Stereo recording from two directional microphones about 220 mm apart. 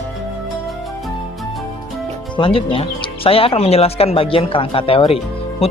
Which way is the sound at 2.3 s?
25° left (ahead or behind).